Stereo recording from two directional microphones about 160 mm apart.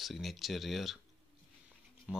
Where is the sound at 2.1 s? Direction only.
5° right (ahead or behind).